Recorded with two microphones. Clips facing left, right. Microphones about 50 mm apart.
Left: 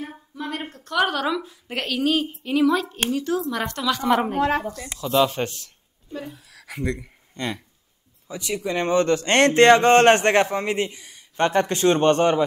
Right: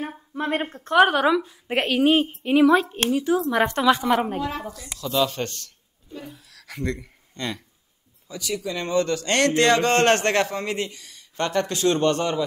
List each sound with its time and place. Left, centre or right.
0.3 s a woman's voice: right
4.4 s speech: left
4.9 s speech: left
8.3 s speech: left